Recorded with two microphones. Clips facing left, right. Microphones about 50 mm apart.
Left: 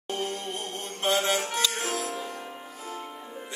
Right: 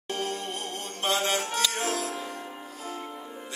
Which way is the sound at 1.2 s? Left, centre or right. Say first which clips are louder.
Even; centre.